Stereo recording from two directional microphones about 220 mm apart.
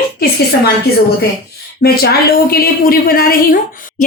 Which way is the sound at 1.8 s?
45° left (ahead or behind).